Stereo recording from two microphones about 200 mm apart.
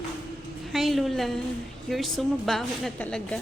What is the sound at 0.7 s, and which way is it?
A woman's voice, centre (ahead or behind).